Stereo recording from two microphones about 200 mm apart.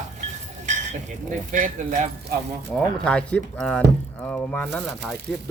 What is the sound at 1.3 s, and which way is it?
Speech, 40° right (ahead or behind).